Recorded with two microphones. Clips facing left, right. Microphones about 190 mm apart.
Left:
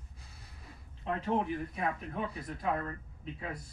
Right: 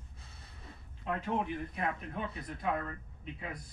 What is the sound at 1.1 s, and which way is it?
Speech, 30° left (ahead or behind).